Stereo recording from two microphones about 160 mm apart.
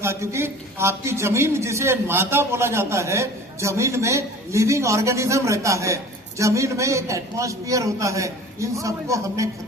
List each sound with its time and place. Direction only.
0.0 s a man's voice: 15° right (ahead or behind)